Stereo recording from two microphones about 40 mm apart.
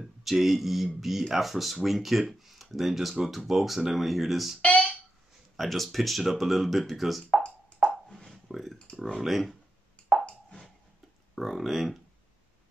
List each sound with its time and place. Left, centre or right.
0.2 s speech: centre
4.6 s speech: left
5.6 s speech: centre
8.5 s speech: centre
11.3 s speech: centre